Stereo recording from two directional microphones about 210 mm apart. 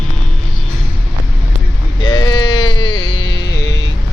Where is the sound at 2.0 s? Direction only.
20° left (ahead or behind).